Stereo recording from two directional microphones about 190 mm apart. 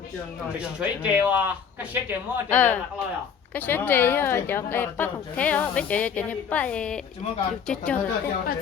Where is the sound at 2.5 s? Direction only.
10° left (ahead or behind).